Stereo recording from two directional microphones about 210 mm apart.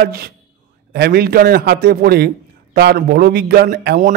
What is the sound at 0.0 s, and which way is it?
A man's voice, 45° right (ahead or behind).